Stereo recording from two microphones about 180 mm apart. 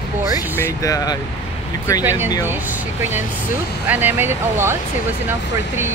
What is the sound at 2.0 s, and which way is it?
Speech, 10° right (ahead or behind).